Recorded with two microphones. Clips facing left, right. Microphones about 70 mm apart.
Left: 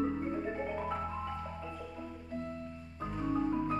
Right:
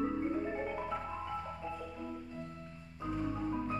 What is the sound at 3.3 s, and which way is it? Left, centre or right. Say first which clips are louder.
Music: left 4 dB; centre.